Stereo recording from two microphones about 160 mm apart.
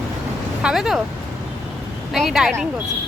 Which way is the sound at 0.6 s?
5° right (ahead or behind).